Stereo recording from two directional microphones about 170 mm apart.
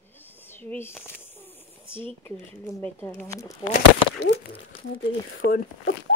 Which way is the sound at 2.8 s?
10° left (ahead or behind).